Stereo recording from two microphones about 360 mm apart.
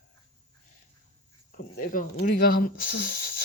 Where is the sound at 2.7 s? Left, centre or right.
Left.